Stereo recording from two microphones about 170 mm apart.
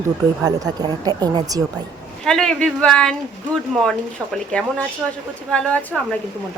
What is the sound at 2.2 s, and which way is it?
A woman's voice, 5° left (ahead or behind).